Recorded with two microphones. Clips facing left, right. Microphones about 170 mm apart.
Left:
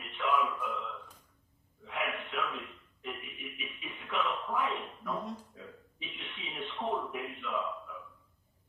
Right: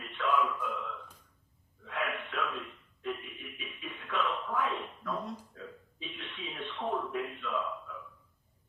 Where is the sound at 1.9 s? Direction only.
10° left (ahead or behind).